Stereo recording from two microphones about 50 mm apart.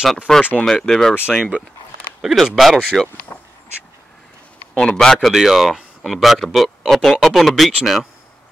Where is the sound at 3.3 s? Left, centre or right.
Left.